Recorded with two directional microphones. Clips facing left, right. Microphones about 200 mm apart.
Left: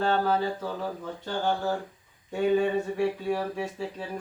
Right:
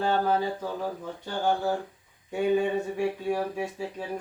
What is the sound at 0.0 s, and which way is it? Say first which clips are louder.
Speech: even; 10° right (ahead or behind).